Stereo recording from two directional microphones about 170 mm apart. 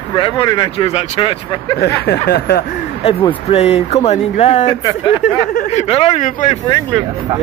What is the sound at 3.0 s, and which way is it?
Speech, 35° left (ahead or behind).